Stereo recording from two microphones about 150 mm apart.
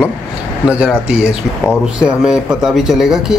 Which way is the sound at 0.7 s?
5° right (ahead or behind).